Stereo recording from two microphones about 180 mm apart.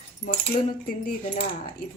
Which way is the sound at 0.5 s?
50° left (ahead or behind).